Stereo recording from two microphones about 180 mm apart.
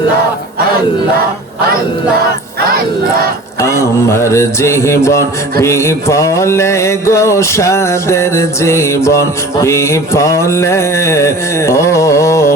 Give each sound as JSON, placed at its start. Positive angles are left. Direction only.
{"t": 2.6, "sound": "battle cry", "side_deg": -55}
{"t": 3.6, "sound": "music", "side_deg": 15}